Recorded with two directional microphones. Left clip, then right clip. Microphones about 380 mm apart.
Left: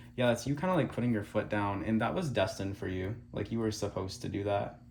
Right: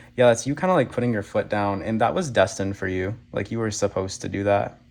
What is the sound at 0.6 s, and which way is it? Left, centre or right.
Speech, centre.